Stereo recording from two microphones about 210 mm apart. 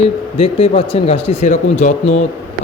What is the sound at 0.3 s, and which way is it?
A man's voice, 25° left (ahead or behind).